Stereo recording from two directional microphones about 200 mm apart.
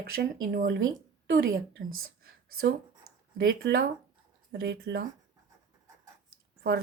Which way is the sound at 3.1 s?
90° right.